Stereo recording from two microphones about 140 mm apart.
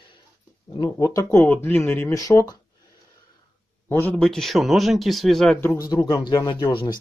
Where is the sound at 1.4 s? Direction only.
10° left (ahead or behind).